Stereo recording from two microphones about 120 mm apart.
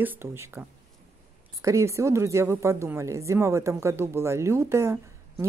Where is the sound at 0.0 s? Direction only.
20° right (ahead or behind).